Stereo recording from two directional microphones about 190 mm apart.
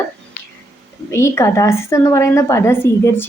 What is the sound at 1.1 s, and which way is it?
A woman's voice, 15° left (ahead or behind).